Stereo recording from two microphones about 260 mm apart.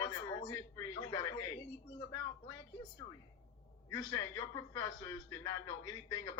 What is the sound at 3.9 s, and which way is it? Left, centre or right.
A man's voice, centre.